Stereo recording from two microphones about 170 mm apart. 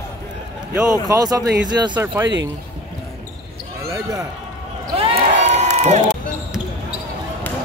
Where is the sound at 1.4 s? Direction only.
75° right (ahead or behind).